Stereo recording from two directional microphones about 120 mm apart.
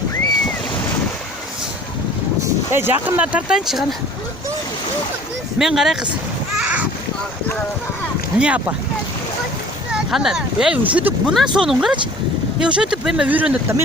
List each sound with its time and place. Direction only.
2.7 s speech: 15° right (ahead or behind)
5.5 s speech: 5° right (ahead or behind)
6.6 s a sound: 10° right (ahead or behind)
8.4 s speech: 10° right (ahead or behind)
9.9 s speech: 5° right (ahead or behind)